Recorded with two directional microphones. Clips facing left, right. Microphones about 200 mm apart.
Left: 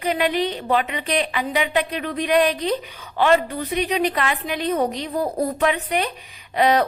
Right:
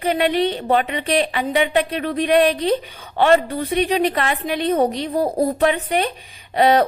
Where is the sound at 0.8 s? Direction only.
35° right (ahead or behind).